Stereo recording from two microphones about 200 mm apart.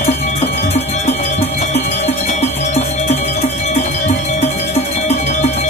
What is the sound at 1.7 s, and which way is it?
Cowbell, 30° left (ahead or behind).